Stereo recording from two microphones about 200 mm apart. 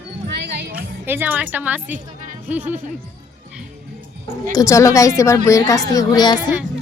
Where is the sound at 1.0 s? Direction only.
10° right (ahead or behind).